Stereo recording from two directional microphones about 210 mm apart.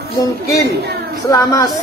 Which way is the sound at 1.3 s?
15° left (ahead or behind).